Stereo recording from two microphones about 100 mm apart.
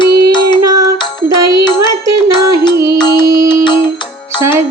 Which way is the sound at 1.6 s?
45° left (ahead or behind).